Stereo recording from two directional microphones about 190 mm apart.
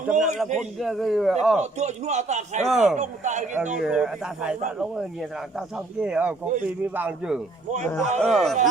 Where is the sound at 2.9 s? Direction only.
40° right (ahead or behind).